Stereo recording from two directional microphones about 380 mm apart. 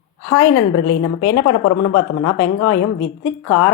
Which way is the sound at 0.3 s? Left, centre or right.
Left.